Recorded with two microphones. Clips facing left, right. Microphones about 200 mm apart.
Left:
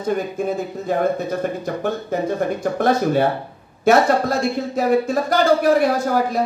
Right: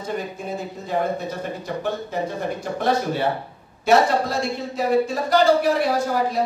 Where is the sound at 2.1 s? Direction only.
50° left (ahead or behind).